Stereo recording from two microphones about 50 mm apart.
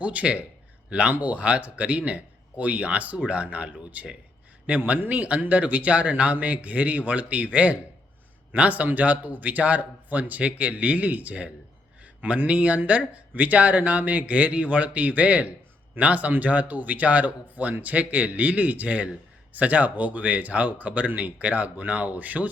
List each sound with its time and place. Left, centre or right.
0.0 s speech: right
4.9 s a man's voice: right